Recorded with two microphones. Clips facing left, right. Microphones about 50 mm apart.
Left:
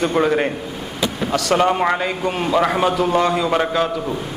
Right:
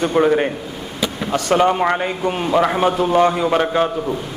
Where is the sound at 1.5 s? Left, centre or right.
Centre.